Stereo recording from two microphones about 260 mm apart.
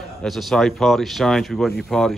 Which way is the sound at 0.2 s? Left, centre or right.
Centre.